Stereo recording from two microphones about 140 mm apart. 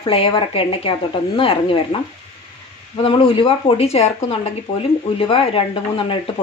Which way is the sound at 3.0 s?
40° left (ahead or behind).